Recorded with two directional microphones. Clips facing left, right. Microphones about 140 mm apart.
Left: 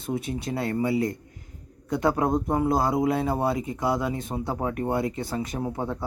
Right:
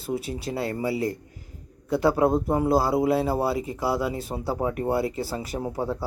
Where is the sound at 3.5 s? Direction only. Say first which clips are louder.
Even; 30° right (ahead or behind).